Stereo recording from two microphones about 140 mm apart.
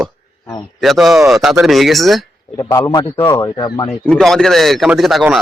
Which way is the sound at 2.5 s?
25° left (ahead or behind).